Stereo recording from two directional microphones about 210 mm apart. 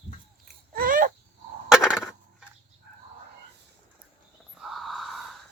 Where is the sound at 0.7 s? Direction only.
40° right (ahead or behind).